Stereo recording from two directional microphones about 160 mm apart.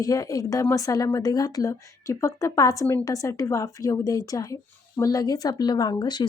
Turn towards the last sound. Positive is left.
turn(degrees=25)  # may be behind; listen again after turning